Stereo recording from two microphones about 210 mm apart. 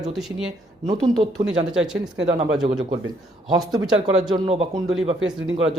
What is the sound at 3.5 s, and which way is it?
Speech, 15° right (ahead or behind).